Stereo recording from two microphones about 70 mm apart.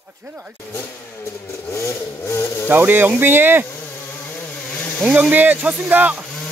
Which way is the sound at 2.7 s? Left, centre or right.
Right.